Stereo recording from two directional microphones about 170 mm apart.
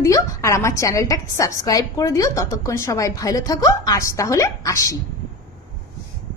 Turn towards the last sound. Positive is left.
turn(degrees=20)  # may be behind; listen again after turning